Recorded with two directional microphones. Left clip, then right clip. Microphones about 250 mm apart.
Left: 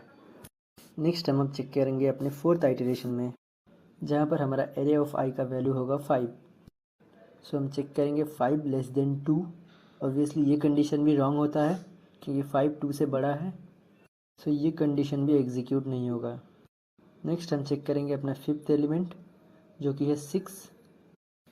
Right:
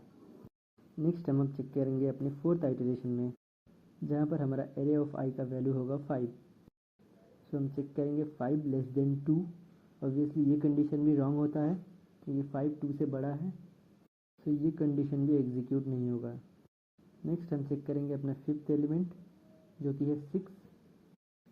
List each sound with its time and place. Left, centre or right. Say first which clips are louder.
1.0 s speech: left 6 dB; left
7.5 s speech: left 6 dB; centre